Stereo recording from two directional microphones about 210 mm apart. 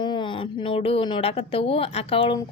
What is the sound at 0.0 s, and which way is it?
Speech, 20° left (ahead or behind).